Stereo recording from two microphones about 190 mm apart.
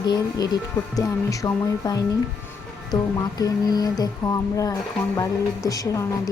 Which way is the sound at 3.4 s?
20° left (ahead or behind).